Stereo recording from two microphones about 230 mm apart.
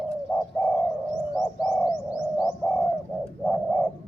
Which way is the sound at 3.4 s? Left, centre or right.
Centre.